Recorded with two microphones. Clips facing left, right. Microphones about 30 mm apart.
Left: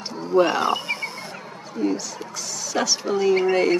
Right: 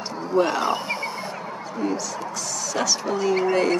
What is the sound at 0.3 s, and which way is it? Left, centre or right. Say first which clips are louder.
Speech: left 2 dB; centre.